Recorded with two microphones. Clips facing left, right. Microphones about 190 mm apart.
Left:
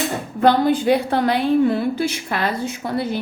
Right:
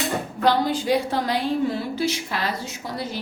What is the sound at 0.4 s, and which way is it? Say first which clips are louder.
A woman's voice: left 6 dB; 55° left (ahead or behind).